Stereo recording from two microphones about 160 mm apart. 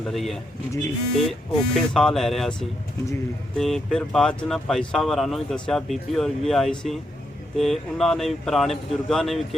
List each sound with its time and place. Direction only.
0.0 s speech: centre (ahead or behind)